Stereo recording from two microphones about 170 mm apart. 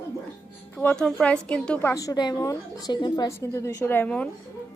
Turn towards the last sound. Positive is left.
turn(degrees=10)  # may be behind; listen again after turning